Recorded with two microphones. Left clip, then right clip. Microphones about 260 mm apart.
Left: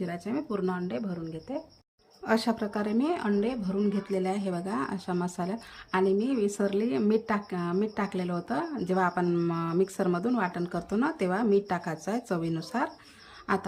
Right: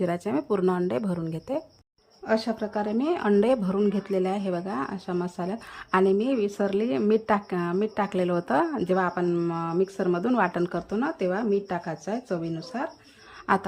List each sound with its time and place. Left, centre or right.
0.0 s speech: centre
2.2 s speech: centre